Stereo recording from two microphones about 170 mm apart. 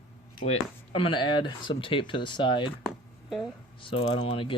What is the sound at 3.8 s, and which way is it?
Speech, 30° left (ahead or behind).